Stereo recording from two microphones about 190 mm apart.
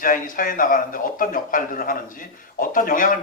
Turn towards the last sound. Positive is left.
turn(degrees=45)  # may be behind; listen again after turning